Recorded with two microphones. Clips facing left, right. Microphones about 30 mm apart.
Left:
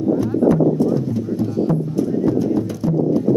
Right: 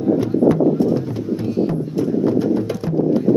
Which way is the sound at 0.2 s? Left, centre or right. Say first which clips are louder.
Left 1 dB; right.